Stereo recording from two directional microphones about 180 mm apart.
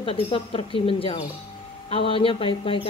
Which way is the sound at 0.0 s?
30° left (ahead or behind).